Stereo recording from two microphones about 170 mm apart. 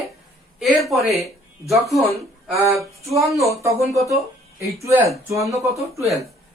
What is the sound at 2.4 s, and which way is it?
Speech, centre (ahead or behind).